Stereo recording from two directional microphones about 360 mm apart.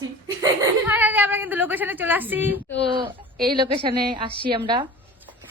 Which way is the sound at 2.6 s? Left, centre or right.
Left.